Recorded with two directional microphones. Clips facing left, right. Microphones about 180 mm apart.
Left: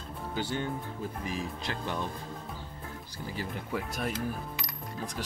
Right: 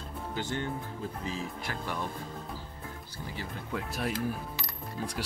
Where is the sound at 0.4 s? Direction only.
10° left (ahead or behind).